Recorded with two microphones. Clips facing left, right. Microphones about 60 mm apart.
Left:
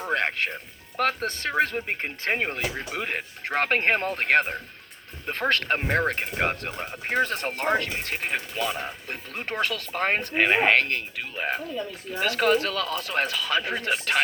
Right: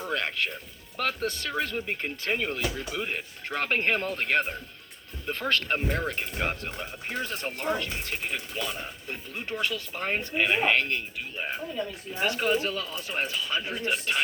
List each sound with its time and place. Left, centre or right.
0.1 s speech: left
7.1 s speech: left
12.4 s speech: left